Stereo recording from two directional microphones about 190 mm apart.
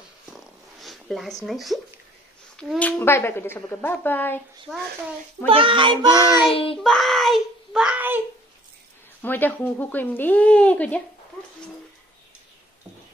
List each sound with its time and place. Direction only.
0.3 s zipper: centre (ahead or behind)
1.4 s a woman's voice: centre (ahead or behind)
5.5 s child singing: 25° right (ahead or behind)
6.5 s child singing: 30° left (ahead or behind)
6.8 s child singing: centre (ahead or behind)
9.2 s a woman's voice: 10° left (ahead or behind)